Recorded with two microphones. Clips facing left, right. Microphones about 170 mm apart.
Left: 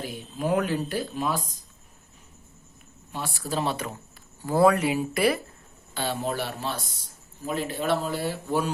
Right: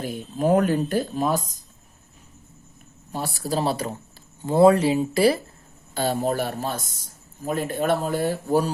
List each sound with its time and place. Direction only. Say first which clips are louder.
0.0 s a man's voice: right 6 dB; 45° right (ahead or behind)
3.1 s speech: right 4 dB; 40° right (ahead or behind)
4.4 s speech: right 4 dB; 25° right (ahead or behind)
5.9 s a man's voice: right 5 dB; 40° right (ahead or behind)